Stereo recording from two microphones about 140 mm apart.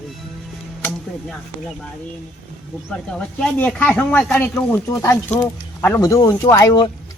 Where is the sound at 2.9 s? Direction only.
10° left (ahead or behind); by 6.9 s 30° left (ahead or behind).